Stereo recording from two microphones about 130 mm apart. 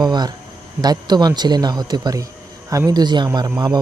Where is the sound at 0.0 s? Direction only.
30° right (ahead or behind).